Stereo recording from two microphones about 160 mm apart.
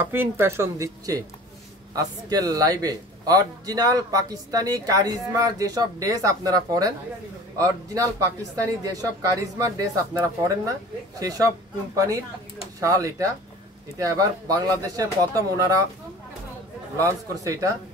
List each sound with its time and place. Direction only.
0.0 s a man's voice: 15° right (ahead or behind)
10.1 s a man's voice: 20° right (ahead or behind)
17.0 s a man's voice: 20° right (ahead or behind)